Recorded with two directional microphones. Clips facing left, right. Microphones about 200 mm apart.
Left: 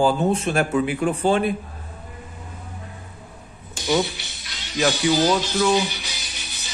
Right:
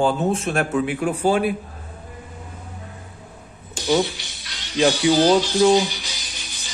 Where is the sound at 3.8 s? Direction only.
15° right (ahead or behind).